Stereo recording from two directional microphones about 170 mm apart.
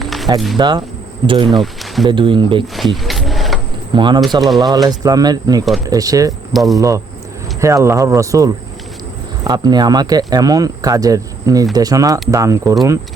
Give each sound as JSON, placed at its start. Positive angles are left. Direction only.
{"t": 0.0, "sound": "a sound", "side_deg": 0}
{"t": 0.5, "sound": "speech", "side_deg": -25}
{"t": 1.5, "sound": "speech", "side_deg": 0}
{"t": 2.0, "sound": "speech", "side_deg": -30}
{"t": 2.7, "sound": "a sound", "side_deg": 0}
{"t": 3.9, "sound": "speech", "side_deg": -25}
{"t": 6.5, "sound": "speech", "side_deg": 0}
{"t": 6.7, "sound": "speech", "side_deg": -20}